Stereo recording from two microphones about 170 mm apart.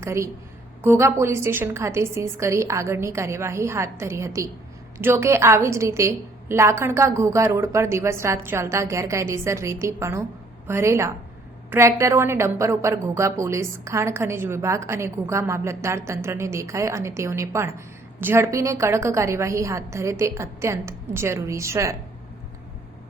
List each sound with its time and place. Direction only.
0.0 s a woman's voice: 15° right (ahead or behind)